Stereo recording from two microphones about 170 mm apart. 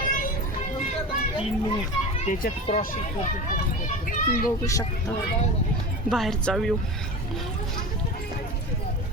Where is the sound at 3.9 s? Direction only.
55° left (ahead or behind).